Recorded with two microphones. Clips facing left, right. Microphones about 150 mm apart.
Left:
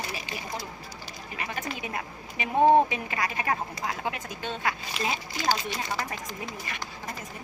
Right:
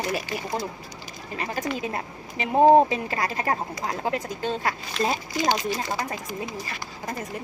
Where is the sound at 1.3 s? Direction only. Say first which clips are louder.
Right 6 dB; 35° right (ahead or behind).